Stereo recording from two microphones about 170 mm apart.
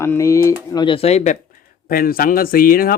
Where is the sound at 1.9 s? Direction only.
60° left (ahead or behind).